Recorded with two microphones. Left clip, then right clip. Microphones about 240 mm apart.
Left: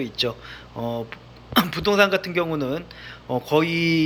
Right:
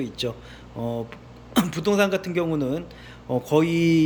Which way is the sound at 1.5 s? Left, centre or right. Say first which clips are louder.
Left 3 dB; centre.